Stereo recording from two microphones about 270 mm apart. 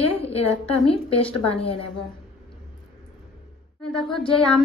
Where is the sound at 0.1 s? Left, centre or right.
Left.